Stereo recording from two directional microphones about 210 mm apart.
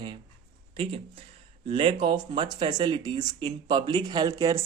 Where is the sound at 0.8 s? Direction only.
25° right (ahead or behind).